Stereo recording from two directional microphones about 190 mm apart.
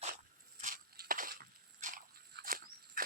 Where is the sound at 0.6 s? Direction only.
45° right (ahead or behind).